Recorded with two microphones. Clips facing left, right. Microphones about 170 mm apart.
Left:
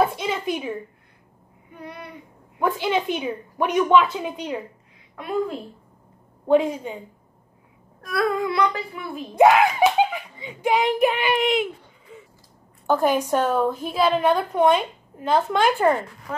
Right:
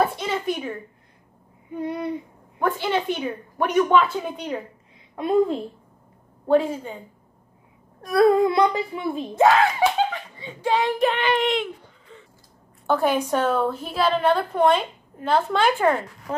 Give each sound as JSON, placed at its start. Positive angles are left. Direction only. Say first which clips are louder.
{"t": 0.2, "sound": "a sound", "louder": "even", "side_deg": 5}
{"t": 1.8, "sound": "a woman's voice", "louder": "right 11 dB", "side_deg": -30}
{"t": 2.6, "sound": "a woman's voice", "louder": "left 1 dB", "side_deg": 10}
{"t": 5.1, "sound": "a woman's voice", "louder": "right 6 dB", "side_deg": -30}
{"t": 6.5, "sound": "a woman's voice", "louder": "left 1 dB", "side_deg": 10}
{"t": 8.0, "sound": "speech", "louder": "right 7 dB", "side_deg": -30}
{"t": 9.4, "sound": "a woman's voice", "louder": "left 2 dB", "side_deg": 15}
{"t": 16.3, "sound": "speech", "louder": "right 3 dB", "side_deg": -30}